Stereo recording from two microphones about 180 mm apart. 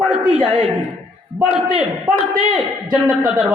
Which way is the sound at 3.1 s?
5° right (ahead or behind).